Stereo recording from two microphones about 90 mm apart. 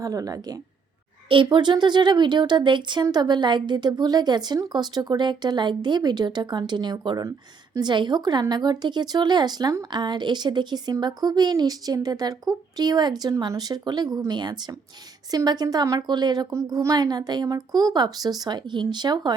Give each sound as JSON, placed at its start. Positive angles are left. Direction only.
{"t": 0.0, "sound": "speech", "side_deg": -40}
{"t": 1.3, "sound": "speech", "side_deg": -65}
{"t": 7.2, "sound": "speech", "side_deg": -40}
{"t": 7.9, "sound": "speech", "side_deg": -55}